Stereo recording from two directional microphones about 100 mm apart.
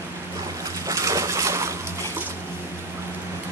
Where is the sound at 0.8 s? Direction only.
35° right (ahead or behind).